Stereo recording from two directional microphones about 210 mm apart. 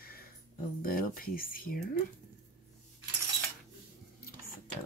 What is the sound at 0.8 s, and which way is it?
Speech, 45° left (ahead or behind).